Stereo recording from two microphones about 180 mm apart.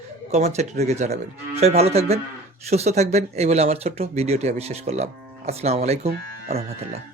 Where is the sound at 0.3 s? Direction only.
40° right (ahead or behind).